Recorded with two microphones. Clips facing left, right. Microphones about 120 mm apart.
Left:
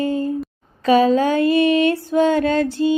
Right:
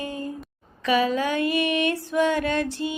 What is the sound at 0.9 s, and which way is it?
Music, 30° left (ahead or behind).